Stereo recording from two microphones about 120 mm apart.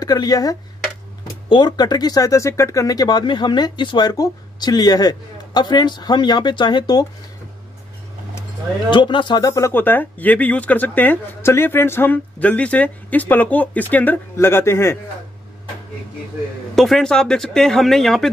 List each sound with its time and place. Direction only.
0.0 s speech: 35° left (ahead or behind)
8.9 s speech: 40° left (ahead or behind); by 15.0 s 20° left (ahead or behind)
16.7 s speech: centre (ahead or behind)